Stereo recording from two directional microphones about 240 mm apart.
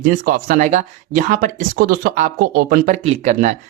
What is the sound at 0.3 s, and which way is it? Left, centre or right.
Speech, right.